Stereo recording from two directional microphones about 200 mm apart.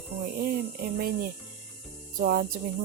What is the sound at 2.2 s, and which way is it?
Speech, 45° right (ahead or behind).